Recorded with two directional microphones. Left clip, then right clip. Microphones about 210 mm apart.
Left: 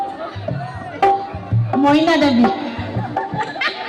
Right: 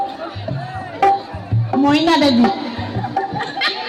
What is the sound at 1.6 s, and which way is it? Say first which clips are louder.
Speech: even; 35° right (ahead or behind).